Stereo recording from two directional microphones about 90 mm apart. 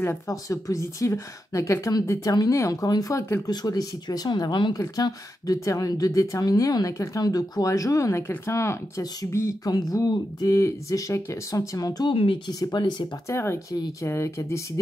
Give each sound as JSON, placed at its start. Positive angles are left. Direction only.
{"t": 0.3, "sound": "speech", "side_deg": 40}
{"t": 4.7, "sound": "speech", "side_deg": 45}
{"t": 9.0, "sound": "speech", "side_deg": 45}
{"t": 12.1, "sound": "speech", "side_deg": 90}
{"t": 12.4, "sound": "speech", "side_deg": 45}
{"t": 13.3, "sound": "speech", "side_deg": 30}